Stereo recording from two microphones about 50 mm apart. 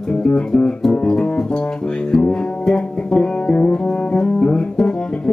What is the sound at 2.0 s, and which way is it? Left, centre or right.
Music, centre.